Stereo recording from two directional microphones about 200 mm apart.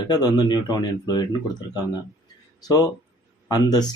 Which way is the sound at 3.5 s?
20° left (ahead or behind).